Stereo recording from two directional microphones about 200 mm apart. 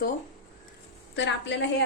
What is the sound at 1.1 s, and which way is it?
Speech, 65° left (ahead or behind).